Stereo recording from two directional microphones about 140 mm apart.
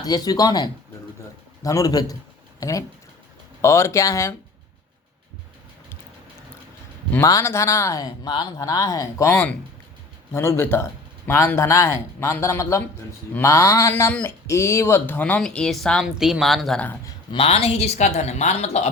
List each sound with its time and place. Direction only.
0.0 s speech: 30° left (ahead or behind)
7.2 s speech: 20° left (ahead or behind)
14.1 s speech: 10° left (ahead or behind)
14.4 s speech: 20° left (ahead or behind)
17.3 s a woman's voice: 45° left (ahead or behind)